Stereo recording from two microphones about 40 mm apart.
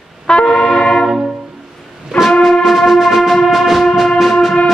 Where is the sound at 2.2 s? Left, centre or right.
Left.